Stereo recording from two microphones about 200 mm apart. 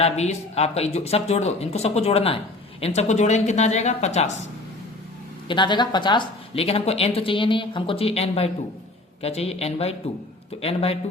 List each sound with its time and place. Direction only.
0.0 s speech: 30° left (ahead or behind)
5.5 s speech: 20° left (ahead or behind)